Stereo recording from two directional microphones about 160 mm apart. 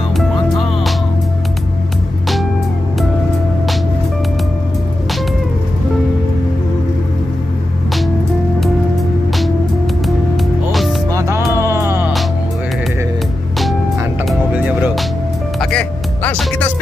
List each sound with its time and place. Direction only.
10.0 s music: centre (ahead or behind)
11.1 s music: 20° right (ahead or behind)
14.2 s music: 10° right (ahead or behind)
15.6 s music: 5° left (ahead or behind)